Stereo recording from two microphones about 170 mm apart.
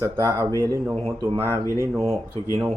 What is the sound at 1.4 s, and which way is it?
Speech, 15° left (ahead or behind).